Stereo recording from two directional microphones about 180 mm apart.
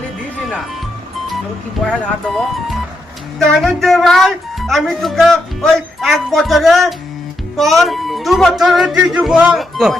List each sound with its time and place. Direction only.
1.8 s speech: centre (ahead or behind)
3.4 s speech: centre (ahead or behind)